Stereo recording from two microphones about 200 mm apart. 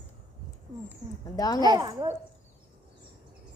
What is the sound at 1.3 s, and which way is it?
Speech, 20° left (ahead or behind).